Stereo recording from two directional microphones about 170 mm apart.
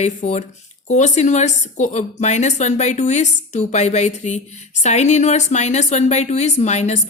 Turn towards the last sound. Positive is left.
turn(degrees=40)  # may be behind; listen again after turning